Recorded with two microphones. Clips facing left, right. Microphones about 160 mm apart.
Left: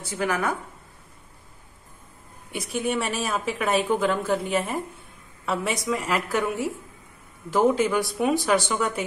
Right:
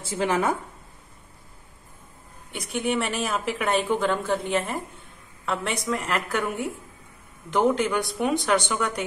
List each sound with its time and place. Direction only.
0.0 s speech: 25° right (ahead or behind)
2.5 s a woman's voice: centre (ahead or behind)